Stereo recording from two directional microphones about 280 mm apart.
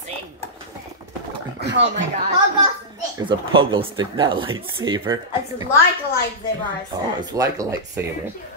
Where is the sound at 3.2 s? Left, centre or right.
Centre.